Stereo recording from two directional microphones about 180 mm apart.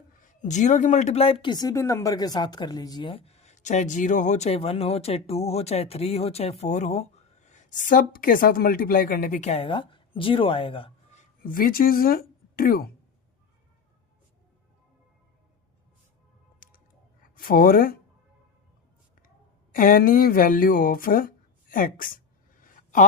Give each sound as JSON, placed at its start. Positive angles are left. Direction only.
{"t": 0.2, "sound": "a woman's voice", "side_deg": 40}
{"t": 11.4, "sound": "speech", "side_deg": 55}
{"t": 16.6, "sound": "a sound", "side_deg": 50}
{"t": 17.3, "sound": "speech", "side_deg": 50}
{"t": 19.7, "sound": "speech", "side_deg": 50}
{"t": 22.6, "sound": "a sound", "side_deg": 50}